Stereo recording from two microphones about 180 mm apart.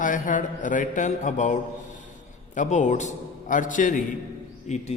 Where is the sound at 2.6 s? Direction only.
40° left (ahead or behind).